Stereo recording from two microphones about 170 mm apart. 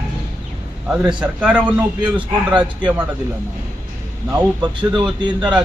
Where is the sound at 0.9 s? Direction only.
5° right (ahead or behind).